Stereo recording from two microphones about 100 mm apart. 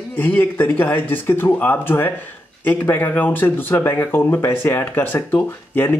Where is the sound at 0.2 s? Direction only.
20° left (ahead or behind).